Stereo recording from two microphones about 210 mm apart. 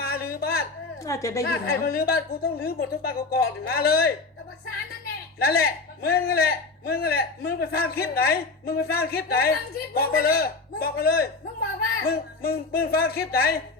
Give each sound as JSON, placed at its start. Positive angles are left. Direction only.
{"t": 0.0, "sound": "a sound", "side_deg": 45}
{"t": 1.0, "sound": "a woman's voice", "side_deg": 15}
{"t": 1.5, "sound": "a man's voice", "side_deg": 45}
{"t": 5.4, "sound": "a man's voice", "side_deg": 45}